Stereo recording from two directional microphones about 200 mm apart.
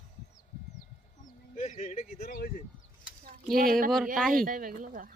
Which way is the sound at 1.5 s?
35° left (ahead or behind).